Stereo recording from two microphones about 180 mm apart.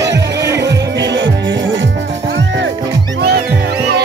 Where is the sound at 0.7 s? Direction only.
75° right (ahead or behind).